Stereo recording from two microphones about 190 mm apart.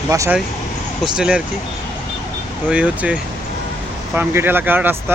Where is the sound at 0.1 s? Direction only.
15° right (ahead or behind).